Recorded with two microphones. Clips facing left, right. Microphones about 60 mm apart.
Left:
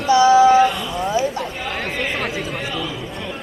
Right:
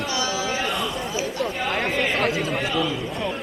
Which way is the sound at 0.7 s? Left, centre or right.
Centre.